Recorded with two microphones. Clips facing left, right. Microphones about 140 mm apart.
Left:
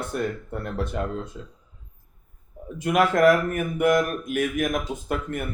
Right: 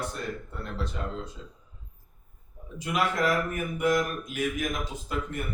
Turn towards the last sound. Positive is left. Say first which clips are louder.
# left 5 dB
turn(degrees=55)  # may be behind; listen again after turning